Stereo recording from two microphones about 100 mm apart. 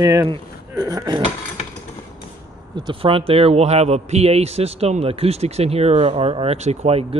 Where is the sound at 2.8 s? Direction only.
60° right (ahead or behind).